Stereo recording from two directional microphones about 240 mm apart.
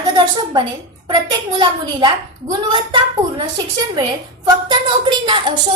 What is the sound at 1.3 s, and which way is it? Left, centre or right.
Speech, centre.